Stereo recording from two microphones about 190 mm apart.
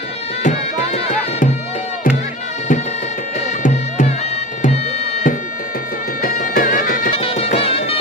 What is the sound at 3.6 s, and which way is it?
Music, 40° left (ahead or behind).